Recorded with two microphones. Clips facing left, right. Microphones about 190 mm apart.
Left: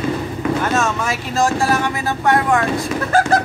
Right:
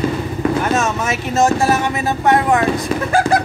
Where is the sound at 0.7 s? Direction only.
20° right (ahead or behind).